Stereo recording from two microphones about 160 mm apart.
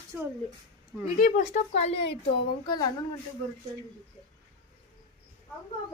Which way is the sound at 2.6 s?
30° left (ahead or behind).